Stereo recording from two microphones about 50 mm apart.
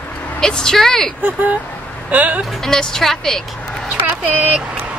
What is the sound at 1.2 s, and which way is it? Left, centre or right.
Speech, right.